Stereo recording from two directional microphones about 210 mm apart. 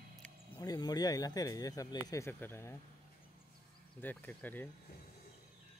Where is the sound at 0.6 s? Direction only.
20° left (ahead or behind).